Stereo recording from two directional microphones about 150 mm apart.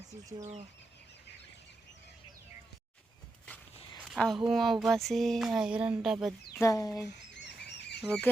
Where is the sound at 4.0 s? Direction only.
Centre (ahead or behind).